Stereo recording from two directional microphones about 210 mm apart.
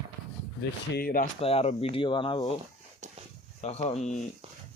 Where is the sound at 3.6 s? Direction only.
30° left (ahead or behind).